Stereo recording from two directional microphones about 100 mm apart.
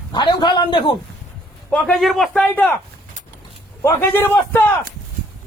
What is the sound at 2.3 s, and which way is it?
Speech, 10° left (ahead or behind).